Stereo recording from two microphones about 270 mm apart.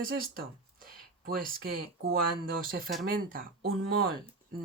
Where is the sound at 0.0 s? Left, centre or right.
Right.